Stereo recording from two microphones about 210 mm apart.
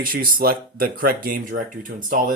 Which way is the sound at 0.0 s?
45° right (ahead or behind).